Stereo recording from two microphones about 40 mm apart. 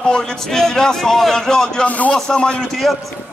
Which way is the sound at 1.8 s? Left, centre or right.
Left.